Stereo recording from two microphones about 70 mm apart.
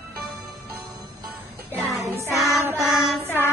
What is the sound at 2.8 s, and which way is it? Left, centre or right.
Child singing, centre.